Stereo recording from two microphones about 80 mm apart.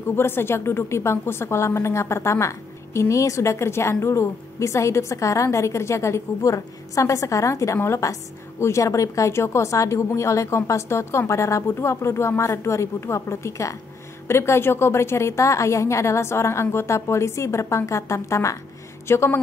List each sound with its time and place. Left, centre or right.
0.1 s a woman's voice: left